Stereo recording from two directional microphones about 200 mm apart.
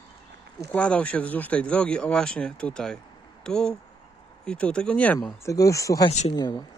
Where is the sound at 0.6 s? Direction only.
5° left (ahead or behind).